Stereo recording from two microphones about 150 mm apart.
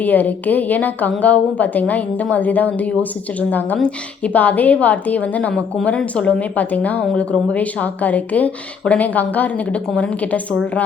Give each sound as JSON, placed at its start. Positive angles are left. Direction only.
{"t": 0.0, "sound": "a woman's voice", "side_deg": 10}